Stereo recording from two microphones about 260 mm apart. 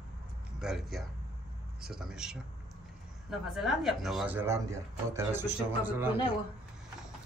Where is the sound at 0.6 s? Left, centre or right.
Centre.